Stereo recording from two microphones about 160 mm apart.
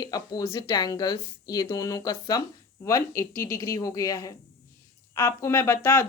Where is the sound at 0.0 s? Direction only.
25° left (ahead or behind).